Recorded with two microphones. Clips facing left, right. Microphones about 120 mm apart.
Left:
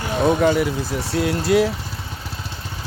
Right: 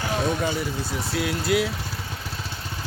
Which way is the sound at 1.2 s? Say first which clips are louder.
Left 6 dB; 35° left (ahead or behind).